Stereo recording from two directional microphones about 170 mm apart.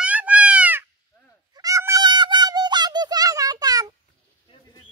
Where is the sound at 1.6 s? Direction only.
20° right (ahead or behind).